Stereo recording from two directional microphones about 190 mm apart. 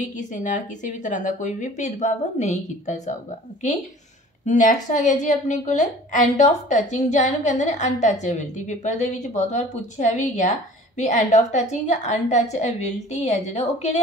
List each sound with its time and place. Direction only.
0.1 s a woman's voice: 40° left (ahead or behind)
4.5 s a woman's voice: 40° left (ahead or behind)